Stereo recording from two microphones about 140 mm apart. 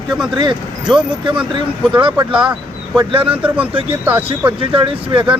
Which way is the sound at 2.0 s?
35° right (ahead or behind).